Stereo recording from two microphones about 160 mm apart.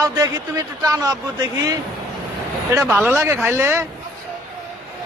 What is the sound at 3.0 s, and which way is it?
Speech, 15° right (ahead or behind).